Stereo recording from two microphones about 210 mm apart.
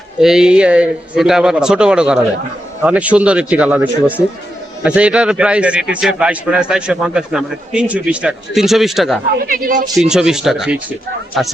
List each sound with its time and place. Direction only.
0.2 s a man's voice: 5° right (ahead or behind)
9.4 s speech: 40° right (ahead or behind)
10.1 s a man's voice: 5° right (ahead or behind)